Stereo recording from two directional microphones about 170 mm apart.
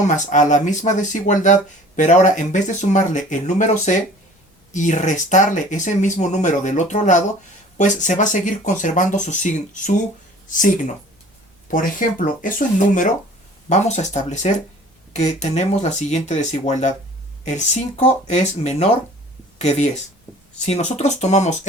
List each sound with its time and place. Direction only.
0.0 s speech: 45° left (ahead or behind)
20.7 s speech: 40° left (ahead or behind)